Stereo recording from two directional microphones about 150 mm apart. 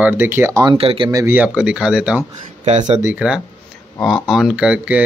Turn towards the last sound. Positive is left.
turn(degrees=-5)  # may be behind; listen again after turning